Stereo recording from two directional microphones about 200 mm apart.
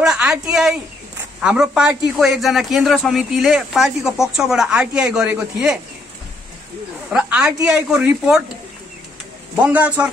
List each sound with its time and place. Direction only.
0.0 s a sound: 5° right (ahead or behind)
1.4 s a man's voice: 5° right (ahead or behind)
7.1 s a man's voice: 5° right (ahead or behind)
9.6 s a man's voice: 5° right (ahead or behind)